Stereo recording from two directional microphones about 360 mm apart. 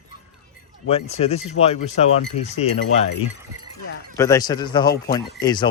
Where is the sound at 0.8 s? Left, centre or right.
Centre.